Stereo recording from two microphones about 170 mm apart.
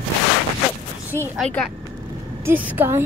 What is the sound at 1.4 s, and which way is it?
Speech, 5° left (ahead or behind).